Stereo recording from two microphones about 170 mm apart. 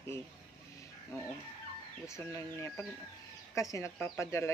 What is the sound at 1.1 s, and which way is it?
Chicken, 20° left (ahead or behind).